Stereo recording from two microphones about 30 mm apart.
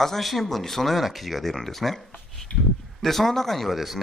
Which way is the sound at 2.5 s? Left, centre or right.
Left.